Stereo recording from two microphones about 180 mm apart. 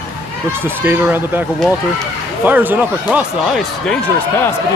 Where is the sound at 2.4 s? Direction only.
10° right (ahead or behind).